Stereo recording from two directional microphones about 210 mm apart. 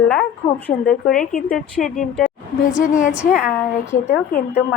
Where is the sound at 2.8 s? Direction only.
35° left (ahead or behind).